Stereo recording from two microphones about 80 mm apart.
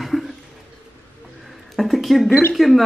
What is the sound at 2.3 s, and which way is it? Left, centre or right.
Speech, left.